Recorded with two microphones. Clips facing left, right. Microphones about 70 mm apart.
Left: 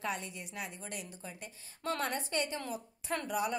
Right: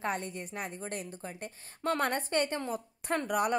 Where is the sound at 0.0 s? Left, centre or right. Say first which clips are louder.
Right 4 dB; right.